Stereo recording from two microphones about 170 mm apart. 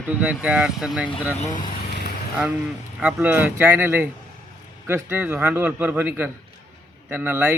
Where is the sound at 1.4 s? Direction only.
50° left (ahead or behind).